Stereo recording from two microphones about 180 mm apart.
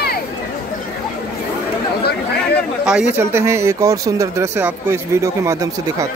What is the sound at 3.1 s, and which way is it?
Speech, 15° right (ahead or behind).